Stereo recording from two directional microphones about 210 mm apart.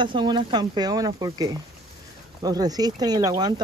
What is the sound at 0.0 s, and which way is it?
Speech, 20° right (ahead or behind).